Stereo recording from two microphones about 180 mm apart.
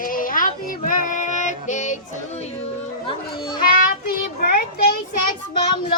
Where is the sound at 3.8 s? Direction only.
55° left (ahead or behind).